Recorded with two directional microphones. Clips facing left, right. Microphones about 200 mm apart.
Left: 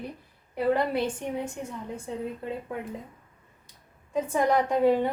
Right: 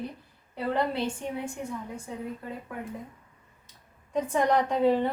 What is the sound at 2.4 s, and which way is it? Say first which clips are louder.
Speech: left 5 dB; 25° left (ahead or behind).